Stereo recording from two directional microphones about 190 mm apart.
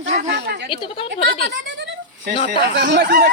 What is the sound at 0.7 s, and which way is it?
Speech, 25° left (ahead or behind).